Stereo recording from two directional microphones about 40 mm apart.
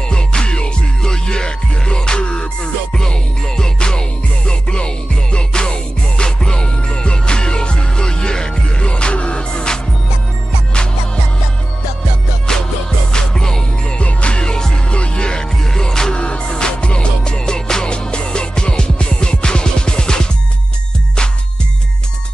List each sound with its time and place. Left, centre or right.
0.1 s music: left
12.5 s music: centre